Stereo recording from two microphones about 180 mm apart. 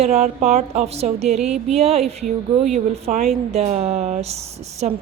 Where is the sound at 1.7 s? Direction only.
35° right (ahead or behind).